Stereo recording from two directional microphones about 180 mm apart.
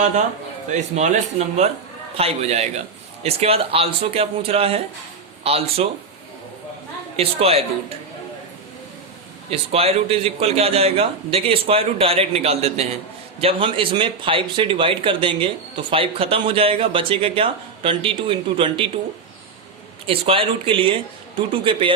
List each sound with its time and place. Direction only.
0.7 s a man's voice: 40° right (ahead or behind)
7.2 s a man's voice: 35° right (ahead or behind)
9.5 s a man's voice: 35° right (ahead or behind)
20.1 s speech: 30° right (ahead or behind)